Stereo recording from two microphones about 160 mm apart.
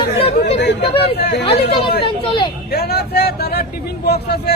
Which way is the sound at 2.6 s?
90° left.